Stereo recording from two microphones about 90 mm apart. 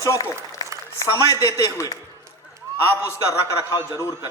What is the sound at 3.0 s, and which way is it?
A man's voice, 35° left (ahead or behind).